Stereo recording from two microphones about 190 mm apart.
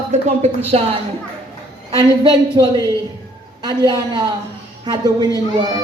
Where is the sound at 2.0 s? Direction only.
20° right (ahead or behind).